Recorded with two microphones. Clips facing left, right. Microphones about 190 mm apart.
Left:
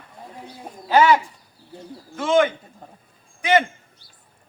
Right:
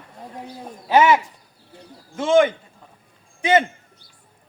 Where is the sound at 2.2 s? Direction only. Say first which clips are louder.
Right 2 dB; 25° right (ahead or behind).